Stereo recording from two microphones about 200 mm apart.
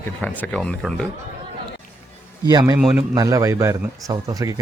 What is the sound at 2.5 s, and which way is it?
Speech, 20° right (ahead or behind).